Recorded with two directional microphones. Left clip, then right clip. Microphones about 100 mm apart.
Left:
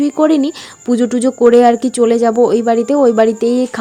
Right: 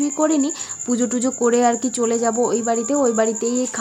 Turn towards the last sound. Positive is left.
turn(degrees=70)  # may be behind; listen again after turning